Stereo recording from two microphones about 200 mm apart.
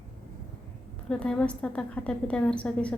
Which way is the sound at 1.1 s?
5° left (ahead or behind).